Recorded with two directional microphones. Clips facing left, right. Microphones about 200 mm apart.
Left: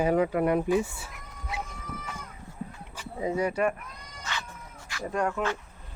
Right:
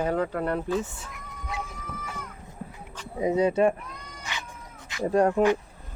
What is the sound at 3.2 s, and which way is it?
Speech, 20° right (ahead or behind).